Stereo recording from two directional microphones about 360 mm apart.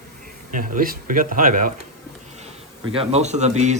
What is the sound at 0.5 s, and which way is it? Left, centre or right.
Speech, right.